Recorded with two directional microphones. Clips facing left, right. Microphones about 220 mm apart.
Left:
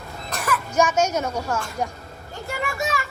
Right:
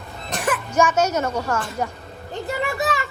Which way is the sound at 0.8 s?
10° left (ahead or behind).